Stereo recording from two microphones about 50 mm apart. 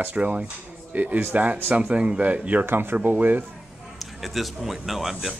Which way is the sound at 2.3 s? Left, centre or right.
Right.